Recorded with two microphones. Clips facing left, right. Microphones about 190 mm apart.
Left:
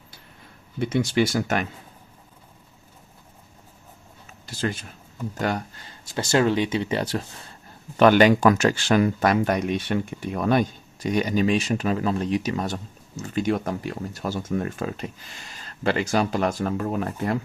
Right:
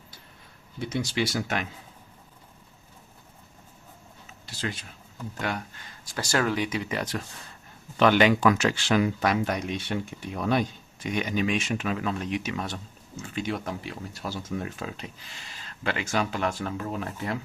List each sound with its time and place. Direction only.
0.8 s speech: 60° left (ahead or behind)
4.4 s speech: 45° left (ahead or behind)
6.1 s speech: 25° left (ahead or behind)
7.9 s speech: 45° left (ahead or behind)
15.4 s speech: 40° left (ahead or behind)